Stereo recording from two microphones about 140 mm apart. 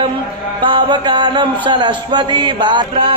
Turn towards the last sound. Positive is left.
turn(degrees=-35)  # may be behind; listen again after turning